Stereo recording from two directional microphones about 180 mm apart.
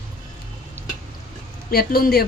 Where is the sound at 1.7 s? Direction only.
60° left (ahead or behind).